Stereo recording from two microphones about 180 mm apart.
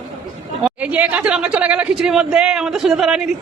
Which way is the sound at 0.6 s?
10° right (ahead or behind).